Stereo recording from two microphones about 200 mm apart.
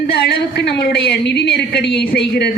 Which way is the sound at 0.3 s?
55° left (ahead or behind).